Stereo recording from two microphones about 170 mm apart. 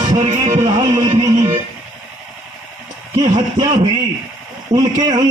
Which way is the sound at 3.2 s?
25° right (ahead or behind).